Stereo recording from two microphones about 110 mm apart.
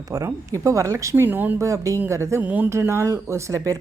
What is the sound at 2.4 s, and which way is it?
Speech, 15° right (ahead or behind).